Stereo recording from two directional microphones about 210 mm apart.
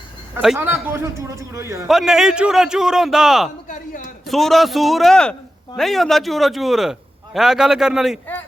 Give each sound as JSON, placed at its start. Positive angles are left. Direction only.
{"t": 0.3, "sound": "a man's voice", "side_deg": -5}
{"t": 1.9, "sound": "a man's voice", "side_deg": 0}
{"t": 3.7, "sound": "a man's voice", "side_deg": 40}
{"t": 4.3, "sound": "a man's voice", "side_deg": 0}